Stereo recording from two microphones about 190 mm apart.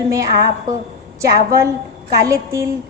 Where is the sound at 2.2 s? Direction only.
15° right (ahead or behind).